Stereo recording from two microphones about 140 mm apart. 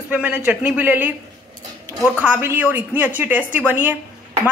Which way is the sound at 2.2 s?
15° right (ahead or behind).